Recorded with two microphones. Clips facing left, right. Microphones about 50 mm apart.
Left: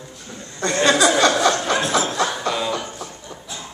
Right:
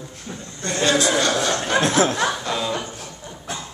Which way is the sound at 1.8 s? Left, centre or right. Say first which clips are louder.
Right 2 dB; right.